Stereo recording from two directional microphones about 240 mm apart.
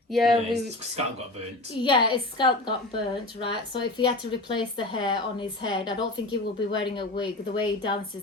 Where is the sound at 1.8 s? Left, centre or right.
Centre.